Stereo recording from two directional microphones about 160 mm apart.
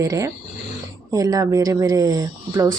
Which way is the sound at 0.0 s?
20° right (ahead or behind).